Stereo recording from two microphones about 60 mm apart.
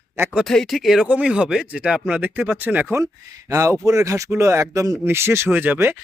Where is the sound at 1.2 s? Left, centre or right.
Centre.